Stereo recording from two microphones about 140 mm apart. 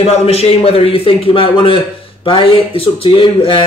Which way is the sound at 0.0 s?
45° left (ahead or behind).